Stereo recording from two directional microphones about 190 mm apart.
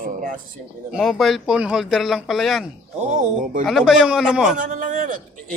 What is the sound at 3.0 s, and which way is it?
Speech, 40° right (ahead or behind).